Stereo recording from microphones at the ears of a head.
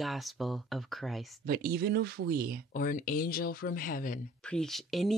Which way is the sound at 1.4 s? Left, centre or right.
Right.